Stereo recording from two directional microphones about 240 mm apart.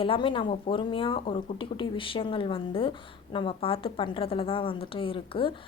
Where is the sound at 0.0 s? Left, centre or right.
Left.